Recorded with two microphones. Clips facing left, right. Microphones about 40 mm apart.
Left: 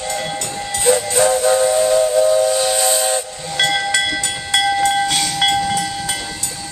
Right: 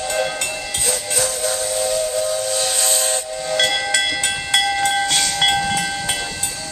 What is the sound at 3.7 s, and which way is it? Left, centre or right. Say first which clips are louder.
Train: left 2 dB; centre.